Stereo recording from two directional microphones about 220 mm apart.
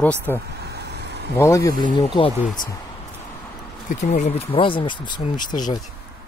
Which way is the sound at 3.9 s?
35° left (ahead or behind).